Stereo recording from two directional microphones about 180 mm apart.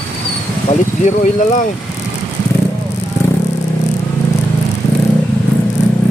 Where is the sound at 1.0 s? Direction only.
45° left (ahead or behind).